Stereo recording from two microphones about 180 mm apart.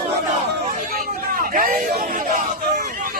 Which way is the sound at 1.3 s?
50° right (ahead or behind).